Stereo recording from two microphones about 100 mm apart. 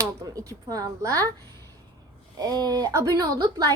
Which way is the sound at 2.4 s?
40° right (ahead or behind).